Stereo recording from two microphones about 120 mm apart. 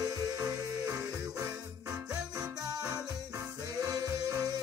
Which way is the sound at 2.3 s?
30° right (ahead or behind).